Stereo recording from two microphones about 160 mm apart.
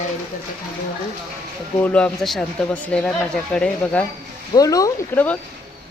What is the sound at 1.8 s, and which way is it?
Speech, 10° left (ahead or behind).